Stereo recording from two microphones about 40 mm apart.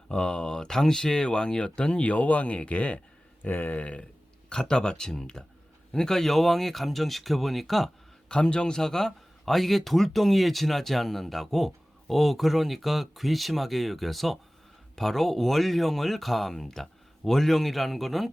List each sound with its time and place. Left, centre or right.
0.1 s speech: left
3.4 s speech: left
4.4 s speech: left; by 7.9 s centre
8.3 s speech: left; by 18.3 s centre